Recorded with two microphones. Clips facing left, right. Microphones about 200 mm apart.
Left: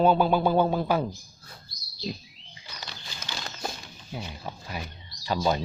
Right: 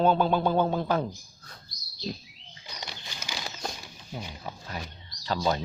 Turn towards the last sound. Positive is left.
turn(degrees=15)  # may be behind; listen again after turning